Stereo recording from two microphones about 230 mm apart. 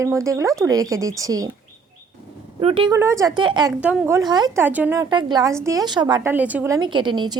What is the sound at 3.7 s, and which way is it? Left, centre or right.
Speech, centre.